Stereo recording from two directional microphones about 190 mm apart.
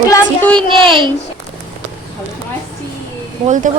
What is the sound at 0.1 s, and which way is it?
Child singing, 10° left (ahead or behind).